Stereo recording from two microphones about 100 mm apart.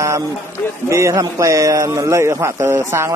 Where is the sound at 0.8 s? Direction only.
30° right (ahead or behind).